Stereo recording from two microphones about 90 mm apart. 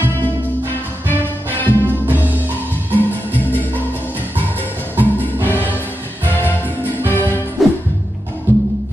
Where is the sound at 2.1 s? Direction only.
20° right (ahead or behind).